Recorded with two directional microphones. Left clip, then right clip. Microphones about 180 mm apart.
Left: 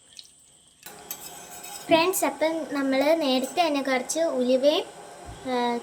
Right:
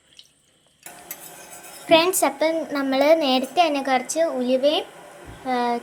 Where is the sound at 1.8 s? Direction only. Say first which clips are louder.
Right 4 dB; 10° right (ahead or behind).